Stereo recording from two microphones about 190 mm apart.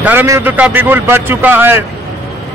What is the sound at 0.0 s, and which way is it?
A man's voice, 10° right (ahead or behind).